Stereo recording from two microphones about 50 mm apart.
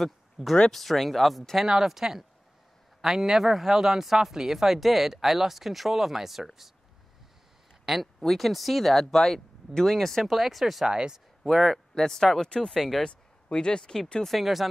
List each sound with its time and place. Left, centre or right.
0.6 s speech: centre
7.8 s speech: centre
10.9 s speech: centre
11.4 s speech: centre
11.9 s speech: centre
13.1 s speech: centre
14.2 s speech: centre